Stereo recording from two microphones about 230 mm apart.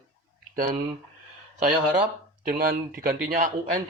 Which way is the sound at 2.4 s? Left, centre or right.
Right.